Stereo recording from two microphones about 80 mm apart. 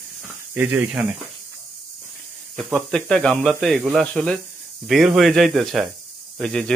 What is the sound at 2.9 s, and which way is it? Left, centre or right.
A man's voice, centre.